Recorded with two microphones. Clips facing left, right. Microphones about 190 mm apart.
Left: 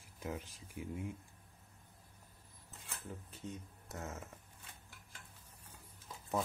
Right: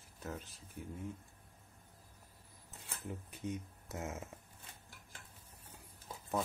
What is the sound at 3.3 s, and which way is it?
Speech, 15° right (ahead or behind).